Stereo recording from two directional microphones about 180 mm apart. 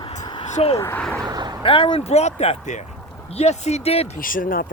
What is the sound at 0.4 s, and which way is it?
Speech, 35° left (ahead or behind).